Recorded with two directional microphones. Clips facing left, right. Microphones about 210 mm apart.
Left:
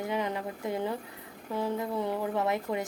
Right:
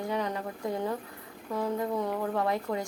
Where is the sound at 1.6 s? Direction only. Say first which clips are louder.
Right 1 dB; 5° left (ahead or behind).